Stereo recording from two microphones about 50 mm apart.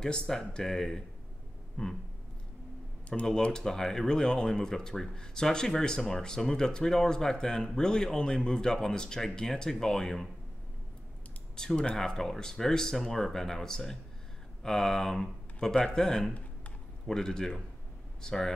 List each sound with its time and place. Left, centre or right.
0.0 s speech: centre
3.1 s speech: centre
11.5 s speech: centre